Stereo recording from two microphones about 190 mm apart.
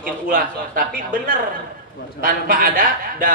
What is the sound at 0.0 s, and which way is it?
Speech, 45° right (ahead or behind).